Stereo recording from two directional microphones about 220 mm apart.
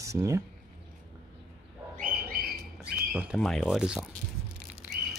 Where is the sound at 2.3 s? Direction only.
45° right (ahead or behind).